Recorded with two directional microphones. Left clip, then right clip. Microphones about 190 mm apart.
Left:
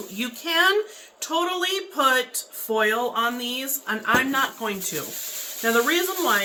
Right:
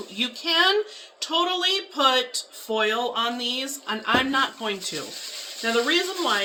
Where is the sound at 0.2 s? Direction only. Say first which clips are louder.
Even; 30° right (ahead or behind).